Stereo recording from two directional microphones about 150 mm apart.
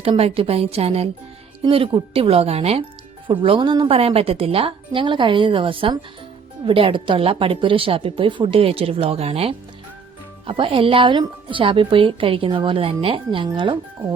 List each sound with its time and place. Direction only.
0.0 s speech: 40° right (ahead or behind)